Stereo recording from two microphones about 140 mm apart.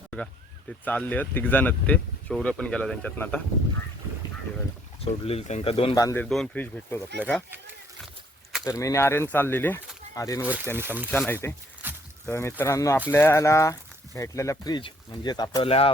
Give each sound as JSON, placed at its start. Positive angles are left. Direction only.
{"t": 0.9, "sound": "speech", "side_deg": 10}
{"t": 5.0, "sound": "speech", "side_deg": 50}
{"t": 5.9, "sound": "speech", "side_deg": 25}
{"t": 6.1, "sound": "speech", "side_deg": 5}
{"t": 8.6, "sound": "speech", "side_deg": 25}
{"t": 10.8, "sound": "speech", "side_deg": -15}
{"t": 11.1, "sound": "speech", "side_deg": 15}
{"t": 11.8, "sound": "a sound", "side_deg": -15}
{"t": 12.2, "sound": "speech", "side_deg": 20}